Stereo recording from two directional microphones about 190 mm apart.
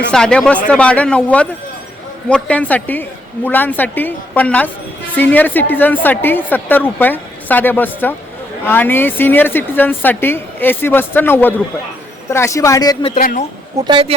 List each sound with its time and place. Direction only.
0.1 s a woman's voice: 5° left (ahead or behind); by 13.1 s 20° left (ahead or behind)
13.1 s a man's voice: 40° left (ahead or behind)
13.7 s speech: 25° right (ahead or behind)